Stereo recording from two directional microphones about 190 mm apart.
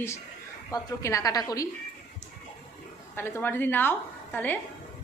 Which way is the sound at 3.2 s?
10° left (ahead or behind).